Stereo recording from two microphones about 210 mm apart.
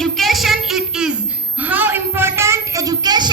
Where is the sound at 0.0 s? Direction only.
Centre (ahead or behind).